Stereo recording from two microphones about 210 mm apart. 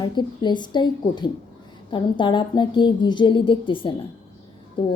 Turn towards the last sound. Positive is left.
turn(degrees=20)  # may be behind; listen again after turning